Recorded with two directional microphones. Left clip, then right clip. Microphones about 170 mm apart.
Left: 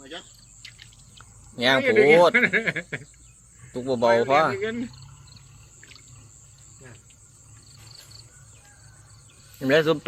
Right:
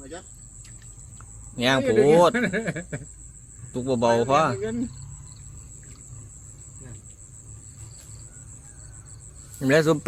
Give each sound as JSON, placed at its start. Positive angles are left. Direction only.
{"t": 1.5, "sound": "speech", "side_deg": -5}
{"t": 1.8, "sound": "speech", "side_deg": 25}
{"t": 3.7, "sound": "a man's voice", "side_deg": -5}
{"t": 4.0, "sound": "speech", "side_deg": 30}
{"t": 4.3, "sound": "speech", "side_deg": -5}
{"t": 4.5, "sound": "speech", "side_deg": 25}
{"t": 9.6, "sound": "speech", "side_deg": -10}